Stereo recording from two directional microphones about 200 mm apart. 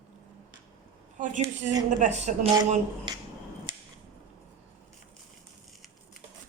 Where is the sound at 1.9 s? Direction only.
35° right (ahead or behind).